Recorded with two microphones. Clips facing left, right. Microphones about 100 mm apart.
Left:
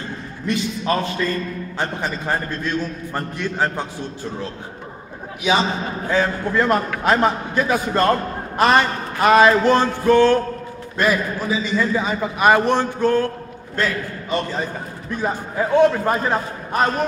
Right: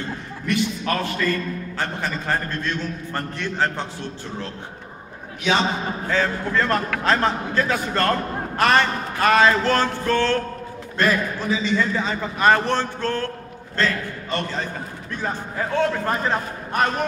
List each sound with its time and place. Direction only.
0.5 s a man's voice: 25° left (ahead or behind)
6.0 s a man's voice: 15° left (ahead or behind)